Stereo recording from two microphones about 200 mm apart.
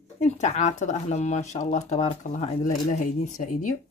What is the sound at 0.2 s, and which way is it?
Speech, 35° left (ahead or behind).